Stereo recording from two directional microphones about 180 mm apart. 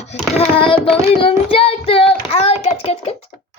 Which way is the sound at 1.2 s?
30° left (ahead or behind).